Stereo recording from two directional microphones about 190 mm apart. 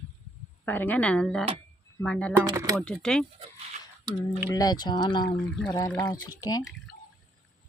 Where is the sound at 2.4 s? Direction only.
20° right (ahead or behind).